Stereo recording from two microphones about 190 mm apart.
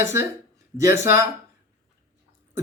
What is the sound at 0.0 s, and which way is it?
Speech, 15° right (ahead or behind).